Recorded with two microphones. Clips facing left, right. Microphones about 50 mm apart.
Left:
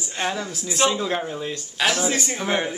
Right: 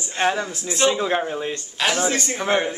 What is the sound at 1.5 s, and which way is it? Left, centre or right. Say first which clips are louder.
Speech: left 2 dB; centre.